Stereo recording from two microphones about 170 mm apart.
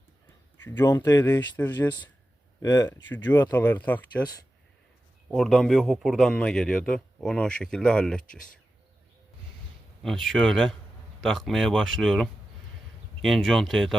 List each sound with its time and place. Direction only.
0.6 s speech: 10° left (ahead or behind)
5.3 s a man's voice: centre (ahead or behind)
10.0 s a man's voice: centre (ahead or behind)